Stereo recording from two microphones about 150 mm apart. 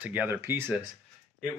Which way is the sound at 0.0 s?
10° right (ahead or behind).